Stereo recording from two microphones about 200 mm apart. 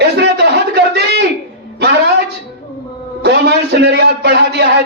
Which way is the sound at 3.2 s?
55° right (ahead or behind).